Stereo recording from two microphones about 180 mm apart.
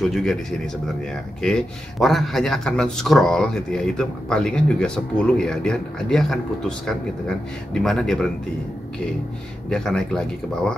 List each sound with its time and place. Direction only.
0.0 s speech: centre (ahead or behind)
9.7 s speech: 5° left (ahead or behind)